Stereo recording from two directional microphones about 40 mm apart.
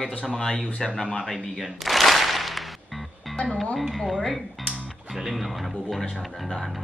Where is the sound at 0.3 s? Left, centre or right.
Centre.